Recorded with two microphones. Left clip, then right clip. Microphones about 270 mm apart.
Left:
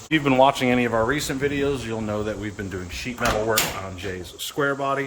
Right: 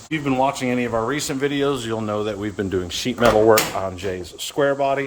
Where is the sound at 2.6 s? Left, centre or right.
Right.